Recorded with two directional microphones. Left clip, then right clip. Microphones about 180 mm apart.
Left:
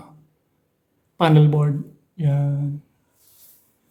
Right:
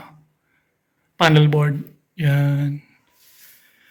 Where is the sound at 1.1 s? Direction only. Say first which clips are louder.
Right 2 dB; 10° left (ahead or behind).